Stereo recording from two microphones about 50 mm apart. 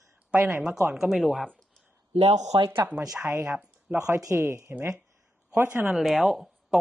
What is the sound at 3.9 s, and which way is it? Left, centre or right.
Speech, right.